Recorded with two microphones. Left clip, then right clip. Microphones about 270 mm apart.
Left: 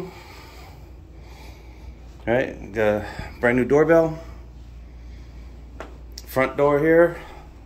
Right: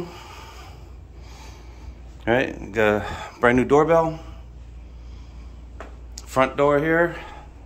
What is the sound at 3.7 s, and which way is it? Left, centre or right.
Speech, centre.